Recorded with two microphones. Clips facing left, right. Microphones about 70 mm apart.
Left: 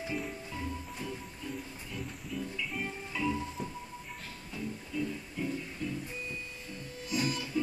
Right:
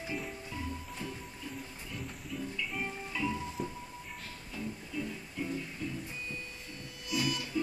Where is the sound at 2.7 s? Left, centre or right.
Centre.